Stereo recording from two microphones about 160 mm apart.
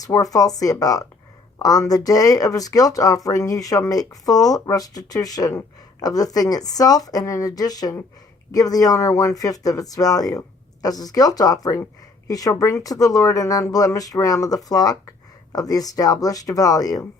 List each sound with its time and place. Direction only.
0.0 s speech: 20° left (ahead or behind)